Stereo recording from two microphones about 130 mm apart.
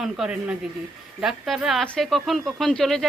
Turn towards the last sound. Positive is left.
turn(degrees=5)  # may be behind; listen again after turning